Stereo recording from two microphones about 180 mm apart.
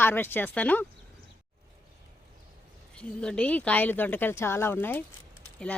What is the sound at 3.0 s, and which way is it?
Speech, 5° left (ahead or behind).